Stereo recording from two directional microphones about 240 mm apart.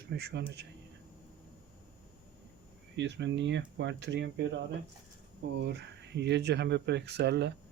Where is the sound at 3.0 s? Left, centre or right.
Right.